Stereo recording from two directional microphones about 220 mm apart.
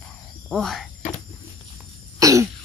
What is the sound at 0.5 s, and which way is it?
Speech, centre (ahead or behind).